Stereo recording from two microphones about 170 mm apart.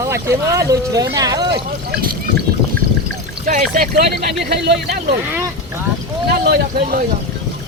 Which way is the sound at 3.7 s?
60° right (ahead or behind).